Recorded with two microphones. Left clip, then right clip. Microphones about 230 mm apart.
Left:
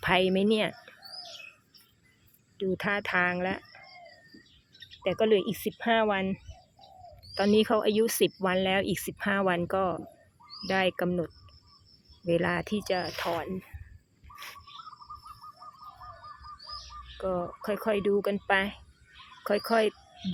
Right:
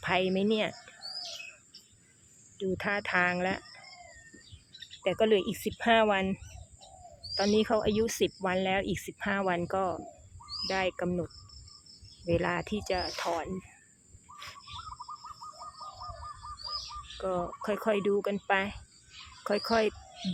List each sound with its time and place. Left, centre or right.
0.0 s speech: centre
2.6 s speech: centre
5.0 s speech: centre
14.3 s bird: left
17.2 s speech: centre